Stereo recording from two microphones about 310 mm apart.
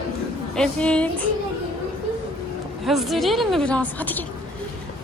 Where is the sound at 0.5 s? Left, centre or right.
Centre.